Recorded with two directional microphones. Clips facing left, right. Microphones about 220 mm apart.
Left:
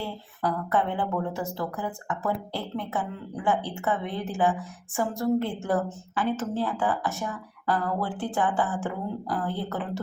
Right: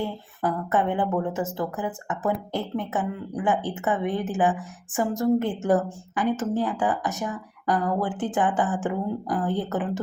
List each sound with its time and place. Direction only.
0.0 s a woman's voice: 20° right (ahead or behind)